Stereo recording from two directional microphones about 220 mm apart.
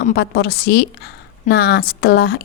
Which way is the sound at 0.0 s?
50° left (ahead or behind).